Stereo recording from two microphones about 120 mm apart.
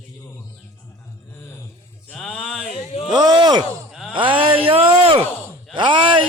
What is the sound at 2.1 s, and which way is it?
Music, 10° left (ahead or behind).